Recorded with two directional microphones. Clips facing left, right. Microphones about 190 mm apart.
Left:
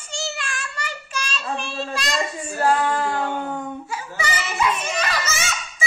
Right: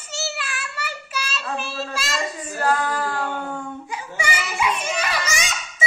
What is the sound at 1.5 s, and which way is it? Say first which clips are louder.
Speech: left 1 dB; 5° right (ahead or behind).